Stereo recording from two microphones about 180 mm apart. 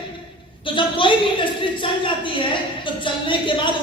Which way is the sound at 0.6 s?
30° left (ahead or behind).